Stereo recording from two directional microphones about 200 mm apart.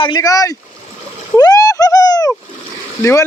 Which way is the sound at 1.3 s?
20° left (ahead or behind).